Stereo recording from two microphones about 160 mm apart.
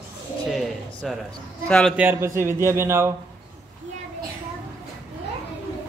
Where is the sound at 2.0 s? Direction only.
15° right (ahead or behind).